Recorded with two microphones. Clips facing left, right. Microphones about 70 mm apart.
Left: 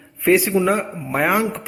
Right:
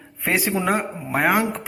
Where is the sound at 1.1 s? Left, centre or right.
Centre.